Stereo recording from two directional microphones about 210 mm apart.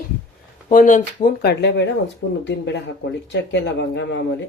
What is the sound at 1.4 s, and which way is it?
Speech, 55° left (ahead or behind).